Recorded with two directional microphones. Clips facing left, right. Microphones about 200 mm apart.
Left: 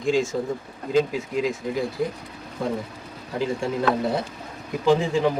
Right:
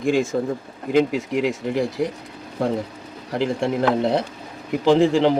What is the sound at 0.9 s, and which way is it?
Speech, 70° right (ahead or behind).